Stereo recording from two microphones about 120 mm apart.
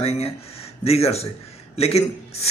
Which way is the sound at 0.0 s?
60° left (ahead or behind).